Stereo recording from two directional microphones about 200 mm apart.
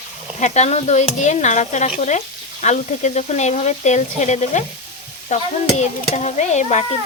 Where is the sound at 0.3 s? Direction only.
35° left (ahead or behind).